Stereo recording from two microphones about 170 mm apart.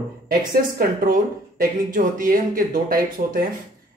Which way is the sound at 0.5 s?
55° right (ahead or behind).